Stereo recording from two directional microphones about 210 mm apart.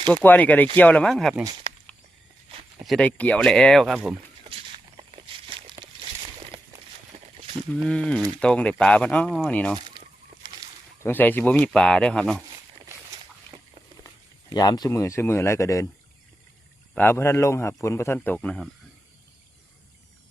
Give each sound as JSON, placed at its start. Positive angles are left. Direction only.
{"t": 0.1, "sound": "speech", "side_deg": 10}
{"t": 2.8, "sound": "speech", "side_deg": 0}
{"t": 4.4, "sound": "walk", "side_deg": -25}
{"t": 6.5, "sound": "a sound", "side_deg": -30}
{"t": 7.7, "sound": "speech", "side_deg": 5}
{"t": 9.7, "sound": "a sound", "side_deg": -20}
{"t": 11.0, "sound": "speech", "side_deg": 10}
{"t": 13.5, "sound": "a sound", "side_deg": -25}
{"t": 14.5, "sound": "speech", "side_deg": 20}
{"t": 16.9, "sound": "speech", "side_deg": 10}